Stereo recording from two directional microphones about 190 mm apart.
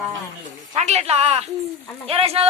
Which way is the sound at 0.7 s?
35° right (ahead or behind).